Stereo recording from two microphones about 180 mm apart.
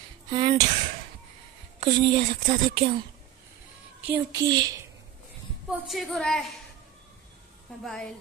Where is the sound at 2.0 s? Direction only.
30° right (ahead or behind).